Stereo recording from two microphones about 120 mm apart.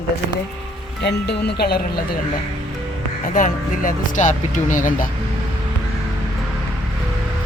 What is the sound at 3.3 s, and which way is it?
Speech, 90° left.